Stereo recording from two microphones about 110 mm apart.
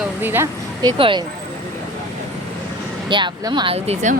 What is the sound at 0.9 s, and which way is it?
Speech, 55° right (ahead or behind).